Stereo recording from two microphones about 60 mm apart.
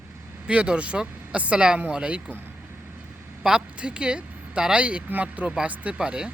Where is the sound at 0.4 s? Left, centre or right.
Centre.